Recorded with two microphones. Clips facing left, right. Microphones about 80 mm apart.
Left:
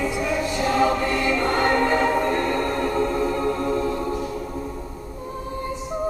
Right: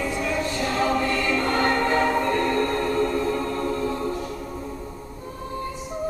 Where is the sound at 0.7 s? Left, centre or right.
Centre.